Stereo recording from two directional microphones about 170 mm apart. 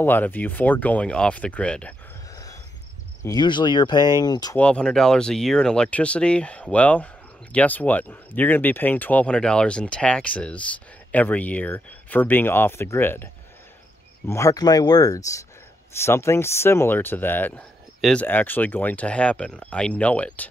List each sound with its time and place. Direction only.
0.0 s speech: 10° left (ahead or behind)
3.2 s speech: 25° left (ahead or behind)
4.6 s speech: 5° left (ahead or behind)